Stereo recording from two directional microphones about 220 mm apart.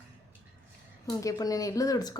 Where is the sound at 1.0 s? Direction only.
15° left (ahead or behind).